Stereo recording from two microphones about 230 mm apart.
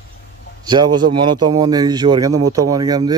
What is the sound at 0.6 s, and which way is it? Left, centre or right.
Speech, centre.